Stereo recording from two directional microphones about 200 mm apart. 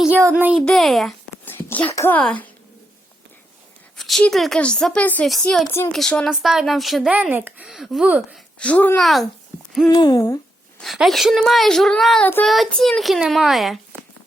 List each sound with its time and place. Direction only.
0.0 s speech: 10° right (ahead or behind)
0.6 s a child's voice: centre (ahead or behind)
3.9 s a woman's voice: centre (ahead or behind)
8.5 s a woman's voice: 5° left (ahead or behind)
9.9 s hoot: 20° left (ahead or behind)
10.8 s a woman's voice: centre (ahead or behind)
13.9 s a sound: 10° right (ahead or behind)